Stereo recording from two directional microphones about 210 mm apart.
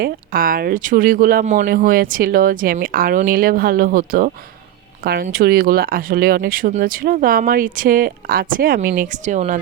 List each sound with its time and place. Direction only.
0.0 s speech: 45° right (ahead or behind)